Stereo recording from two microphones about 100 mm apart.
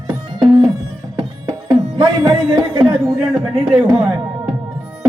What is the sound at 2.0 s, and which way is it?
Speech, 50° right (ahead or behind).